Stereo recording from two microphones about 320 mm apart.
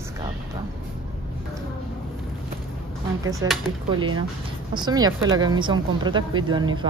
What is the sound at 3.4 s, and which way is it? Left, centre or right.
Speech, centre.